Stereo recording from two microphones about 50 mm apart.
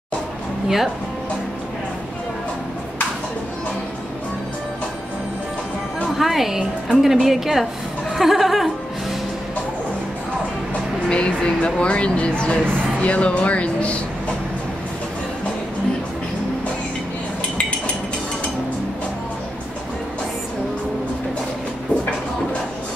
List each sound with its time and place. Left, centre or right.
6.1 s a woman's voice: centre
10.7 s speech: left